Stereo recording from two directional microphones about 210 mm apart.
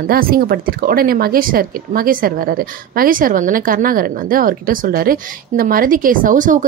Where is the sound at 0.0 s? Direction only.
45° right (ahead or behind).